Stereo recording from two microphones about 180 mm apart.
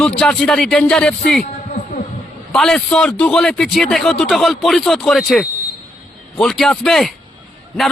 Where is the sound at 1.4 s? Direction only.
45° left (ahead or behind).